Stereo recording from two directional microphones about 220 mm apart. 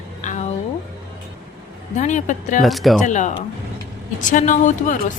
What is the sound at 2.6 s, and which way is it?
Speech, centre (ahead or behind).